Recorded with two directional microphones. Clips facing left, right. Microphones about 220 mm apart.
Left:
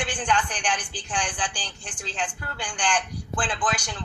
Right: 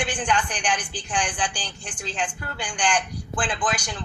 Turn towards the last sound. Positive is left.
turn(degrees=-15)  # may be behind; listen again after turning